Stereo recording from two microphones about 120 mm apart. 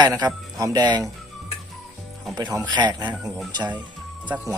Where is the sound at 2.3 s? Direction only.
35° right (ahead or behind).